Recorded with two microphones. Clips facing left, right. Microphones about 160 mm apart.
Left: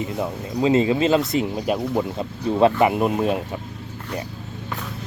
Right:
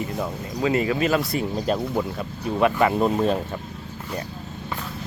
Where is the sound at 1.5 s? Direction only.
10° left (ahead or behind).